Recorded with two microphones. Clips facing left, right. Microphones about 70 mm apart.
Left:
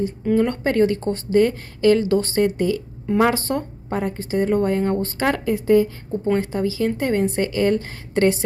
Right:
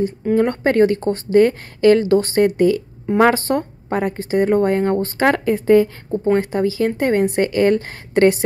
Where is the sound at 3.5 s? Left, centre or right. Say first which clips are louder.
Right 4 dB; right.